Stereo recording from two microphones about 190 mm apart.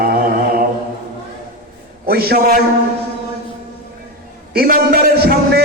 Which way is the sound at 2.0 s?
55° right (ahead or behind).